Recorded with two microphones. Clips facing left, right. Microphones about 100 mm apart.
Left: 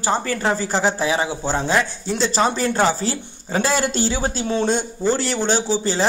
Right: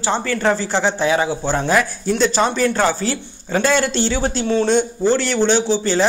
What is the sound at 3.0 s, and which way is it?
Speech, 30° left (ahead or behind).